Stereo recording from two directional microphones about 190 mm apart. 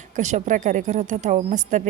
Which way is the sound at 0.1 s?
40° right (ahead or behind).